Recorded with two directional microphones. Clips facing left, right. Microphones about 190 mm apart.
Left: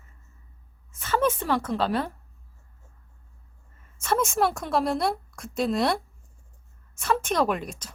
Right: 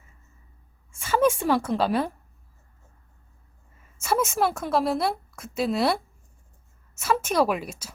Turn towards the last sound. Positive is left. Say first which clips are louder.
# right 2 dB
turn(degrees=-5)  # may be behind; listen again after turning